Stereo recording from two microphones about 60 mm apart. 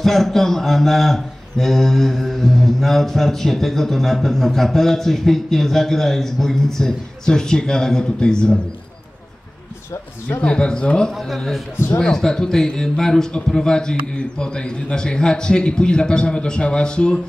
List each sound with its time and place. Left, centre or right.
0.0 s a man's voice: centre
10.4 s speech: centre
11.2 s a man's voice: centre